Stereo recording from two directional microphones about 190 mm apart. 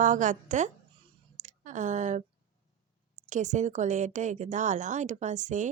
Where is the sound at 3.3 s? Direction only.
40° right (ahead or behind).